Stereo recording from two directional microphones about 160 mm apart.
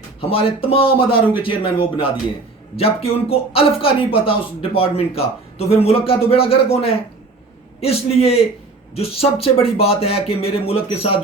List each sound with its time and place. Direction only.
0.2 s speech: 35° left (ahead or behind)